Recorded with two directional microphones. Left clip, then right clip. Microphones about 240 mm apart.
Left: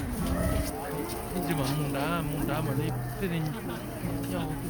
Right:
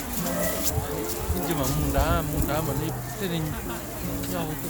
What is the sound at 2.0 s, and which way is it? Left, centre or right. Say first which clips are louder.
Speech: right 4 dB; right.